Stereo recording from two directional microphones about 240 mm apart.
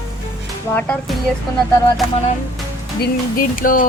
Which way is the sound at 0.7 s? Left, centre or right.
Centre.